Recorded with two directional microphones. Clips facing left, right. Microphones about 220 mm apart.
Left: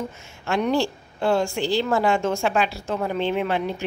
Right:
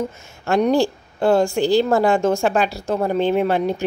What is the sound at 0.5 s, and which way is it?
A woman's voice, 40° right (ahead or behind).